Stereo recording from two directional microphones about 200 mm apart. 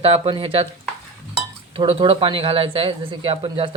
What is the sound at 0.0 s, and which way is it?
Speech, 25° right (ahead or behind).